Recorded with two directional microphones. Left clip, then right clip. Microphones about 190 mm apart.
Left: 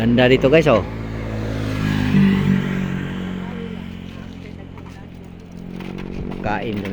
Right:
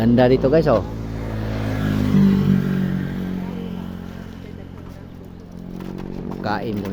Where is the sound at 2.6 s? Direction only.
40° right (ahead or behind).